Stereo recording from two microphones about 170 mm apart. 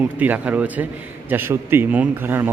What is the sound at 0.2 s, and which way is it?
A man's voice, 10° right (ahead or behind).